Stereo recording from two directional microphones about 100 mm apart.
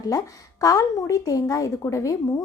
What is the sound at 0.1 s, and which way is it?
A woman's voice, 40° left (ahead or behind).